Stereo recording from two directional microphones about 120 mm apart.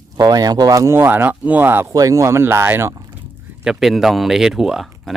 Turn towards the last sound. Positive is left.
turn(degrees=0)  # may be behind; listen again after turning